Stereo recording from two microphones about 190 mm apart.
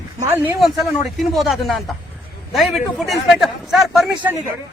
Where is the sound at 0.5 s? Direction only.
Centre (ahead or behind).